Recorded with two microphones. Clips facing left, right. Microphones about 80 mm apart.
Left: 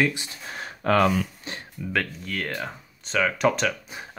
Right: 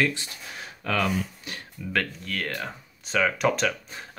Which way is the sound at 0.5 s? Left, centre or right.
Left.